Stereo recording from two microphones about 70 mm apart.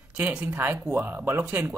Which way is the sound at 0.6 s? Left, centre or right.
Right.